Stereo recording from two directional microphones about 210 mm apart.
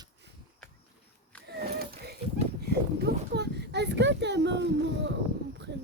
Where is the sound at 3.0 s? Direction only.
50° right (ahead or behind).